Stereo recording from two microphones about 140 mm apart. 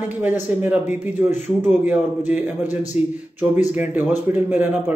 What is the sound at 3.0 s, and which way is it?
Speech, 50° left (ahead or behind).